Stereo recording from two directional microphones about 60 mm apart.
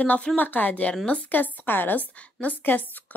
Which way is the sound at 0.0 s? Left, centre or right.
Left.